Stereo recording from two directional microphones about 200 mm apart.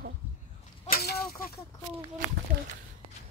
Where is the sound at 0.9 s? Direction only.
50° left (ahead or behind).